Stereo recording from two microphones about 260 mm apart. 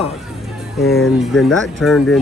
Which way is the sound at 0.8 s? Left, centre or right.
Centre.